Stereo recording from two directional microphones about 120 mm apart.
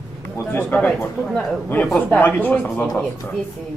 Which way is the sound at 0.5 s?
15° left (ahead or behind).